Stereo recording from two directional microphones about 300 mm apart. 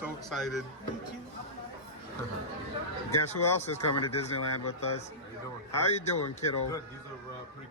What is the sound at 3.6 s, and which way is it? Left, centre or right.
Speech, left.